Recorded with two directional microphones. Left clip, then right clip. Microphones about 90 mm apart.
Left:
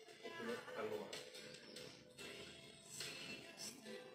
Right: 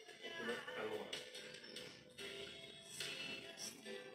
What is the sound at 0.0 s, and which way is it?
Music, 35° left (ahead or behind).